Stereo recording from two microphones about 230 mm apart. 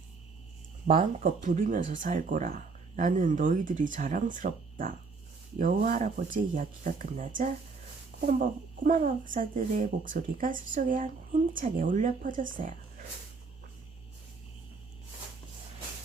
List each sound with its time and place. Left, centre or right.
0.9 s speech: right